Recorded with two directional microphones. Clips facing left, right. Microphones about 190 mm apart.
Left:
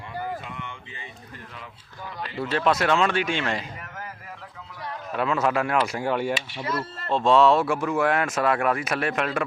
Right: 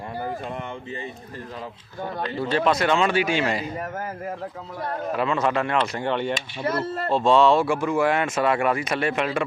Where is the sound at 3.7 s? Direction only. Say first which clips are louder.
Right 9 dB; 45° right (ahead or behind).